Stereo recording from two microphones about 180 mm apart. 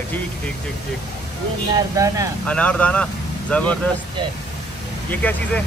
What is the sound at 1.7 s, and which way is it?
Speech, 20° right (ahead or behind).